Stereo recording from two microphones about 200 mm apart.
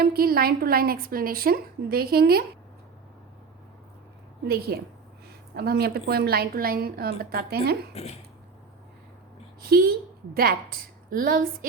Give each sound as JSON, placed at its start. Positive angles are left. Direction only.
{"t": 0.0, "sound": "speech", "side_deg": -50}
{"t": 4.7, "sound": "speech", "side_deg": -50}
{"t": 7.9, "sound": "speech", "side_deg": 30}
{"t": 9.6, "sound": "a woman's voice", "side_deg": -50}